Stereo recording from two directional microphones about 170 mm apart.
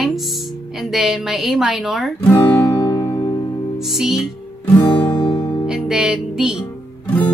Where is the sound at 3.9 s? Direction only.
Centre (ahead or behind).